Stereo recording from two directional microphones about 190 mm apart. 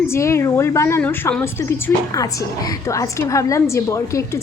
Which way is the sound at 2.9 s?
15° left (ahead or behind).